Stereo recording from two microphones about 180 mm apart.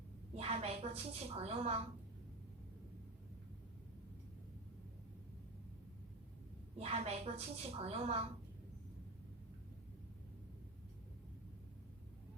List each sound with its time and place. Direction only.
0.3 s a woman's voice: 35° right (ahead or behind)
6.7 s a woman's voice: 35° right (ahead or behind)